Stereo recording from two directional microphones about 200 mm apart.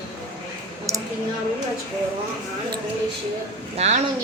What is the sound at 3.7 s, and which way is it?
Speech, 35° right (ahead or behind).